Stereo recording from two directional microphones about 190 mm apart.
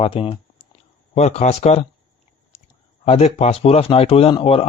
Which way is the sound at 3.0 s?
30° left (ahead or behind).